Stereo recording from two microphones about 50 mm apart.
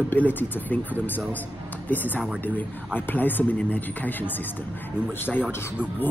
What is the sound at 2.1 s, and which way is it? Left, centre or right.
Speech, right.